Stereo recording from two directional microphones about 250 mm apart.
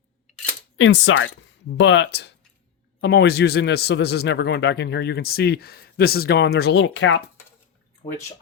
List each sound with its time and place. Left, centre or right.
0.8 s a man's voice: left